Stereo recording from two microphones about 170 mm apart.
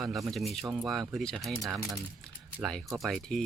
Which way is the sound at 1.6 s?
20° right (ahead or behind).